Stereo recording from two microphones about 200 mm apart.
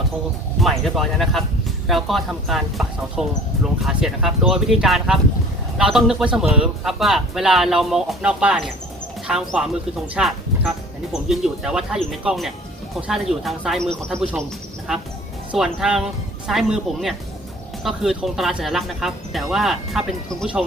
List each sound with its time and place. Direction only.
0.6 s speech: centre (ahead or behind)